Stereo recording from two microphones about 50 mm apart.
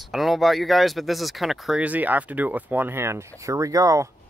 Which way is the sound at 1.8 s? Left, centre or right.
Right.